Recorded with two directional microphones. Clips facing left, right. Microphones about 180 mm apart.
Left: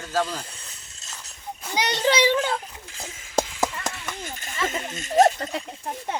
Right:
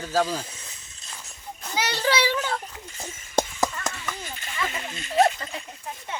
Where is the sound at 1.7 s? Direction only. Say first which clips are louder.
Left 3 dB; 20° left (ahead or behind).